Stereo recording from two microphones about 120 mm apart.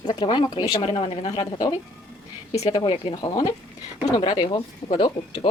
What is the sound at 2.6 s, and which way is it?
Speech, 45° left (ahead or behind).